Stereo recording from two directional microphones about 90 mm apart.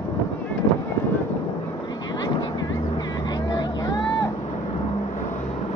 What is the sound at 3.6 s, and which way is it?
Music, 50° left (ahead or behind).